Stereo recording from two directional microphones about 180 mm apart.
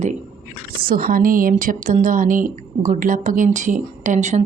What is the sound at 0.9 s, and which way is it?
A woman's voice, 55° right (ahead or behind).